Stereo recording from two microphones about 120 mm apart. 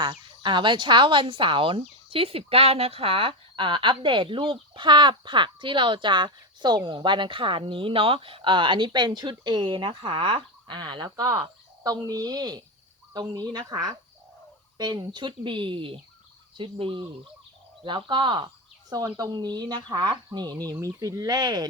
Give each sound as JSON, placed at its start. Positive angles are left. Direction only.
{"t": 0.0, "sound": "speech", "side_deg": -40}
{"t": 11.3, "sound": "speech", "side_deg": -30}